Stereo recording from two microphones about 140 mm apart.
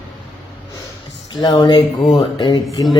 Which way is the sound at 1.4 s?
30° left (ahead or behind).